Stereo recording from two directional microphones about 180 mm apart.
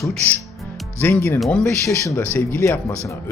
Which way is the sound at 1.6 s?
15° left (ahead or behind).